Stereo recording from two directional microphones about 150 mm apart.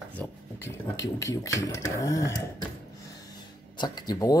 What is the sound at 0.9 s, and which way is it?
Speech, 20° left (ahead or behind).